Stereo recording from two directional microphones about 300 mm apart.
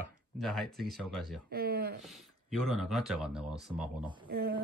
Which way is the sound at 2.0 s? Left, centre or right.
Centre.